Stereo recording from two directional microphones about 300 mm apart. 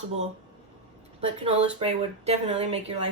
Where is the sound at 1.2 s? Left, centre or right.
Centre.